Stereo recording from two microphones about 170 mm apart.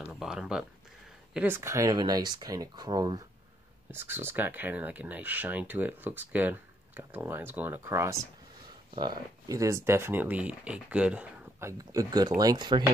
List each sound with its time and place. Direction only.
0.0 s speech: 5° right (ahead or behind)
11.8 s speech: 20° right (ahead or behind)